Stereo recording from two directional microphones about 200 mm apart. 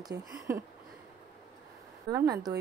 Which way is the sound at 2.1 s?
20° right (ahead or behind).